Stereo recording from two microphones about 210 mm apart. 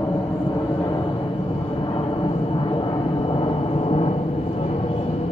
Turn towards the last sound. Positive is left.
turn(degrees=25)  # may be behind; listen again after turning